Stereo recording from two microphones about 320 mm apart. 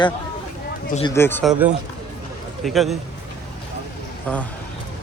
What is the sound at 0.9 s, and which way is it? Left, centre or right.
Speech, centre.